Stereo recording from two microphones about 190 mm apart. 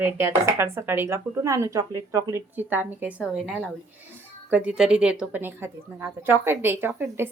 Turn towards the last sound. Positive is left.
turn(degrees=-10)  # may be behind; listen again after turning